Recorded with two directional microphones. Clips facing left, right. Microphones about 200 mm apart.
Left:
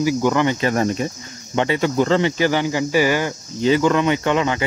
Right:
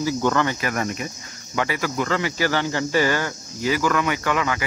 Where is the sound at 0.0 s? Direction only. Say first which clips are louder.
Left 4 dB; 15° left (ahead or behind).